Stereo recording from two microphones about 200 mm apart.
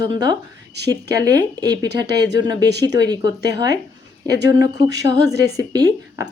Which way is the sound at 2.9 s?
20° right (ahead or behind).